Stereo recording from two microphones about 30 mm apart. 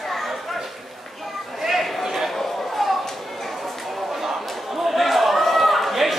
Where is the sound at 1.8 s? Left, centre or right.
Centre.